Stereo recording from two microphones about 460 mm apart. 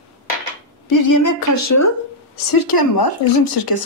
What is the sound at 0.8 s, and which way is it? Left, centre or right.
A woman's voice, left.